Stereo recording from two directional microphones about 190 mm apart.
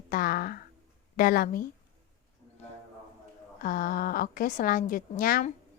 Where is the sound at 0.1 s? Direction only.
50° left (ahead or behind).